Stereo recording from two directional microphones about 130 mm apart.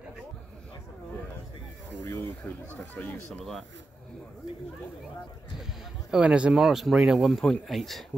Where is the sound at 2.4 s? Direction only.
10° left (ahead or behind).